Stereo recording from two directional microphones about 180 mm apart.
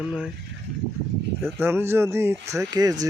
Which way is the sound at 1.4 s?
15° right (ahead or behind).